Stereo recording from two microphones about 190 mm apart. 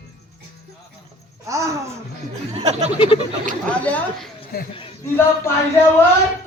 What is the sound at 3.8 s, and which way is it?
Speech, 10° left (ahead or behind).